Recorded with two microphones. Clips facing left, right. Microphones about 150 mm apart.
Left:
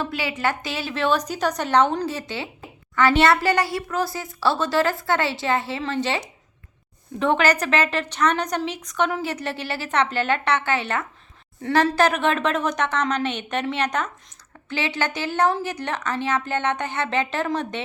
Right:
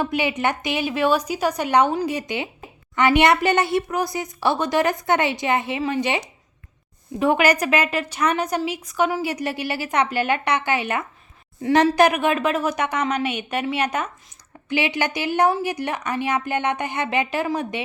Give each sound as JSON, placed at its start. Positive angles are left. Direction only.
{"t": 0.0, "sound": "a woman's voice", "side_deg": -20}